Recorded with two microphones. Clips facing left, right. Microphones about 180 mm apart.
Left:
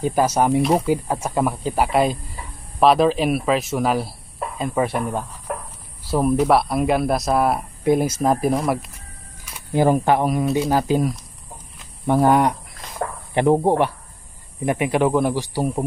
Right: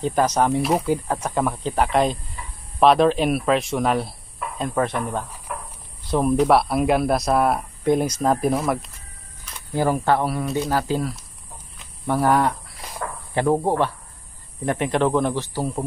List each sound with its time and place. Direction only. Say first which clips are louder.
0.0 s speech: left 1 dB; 10° left (ahead or behind)
5.5 s a sound: left 5 dB; 45° left (ahead or behind)
6.0 s speech: even; 5° left (ahead or behind)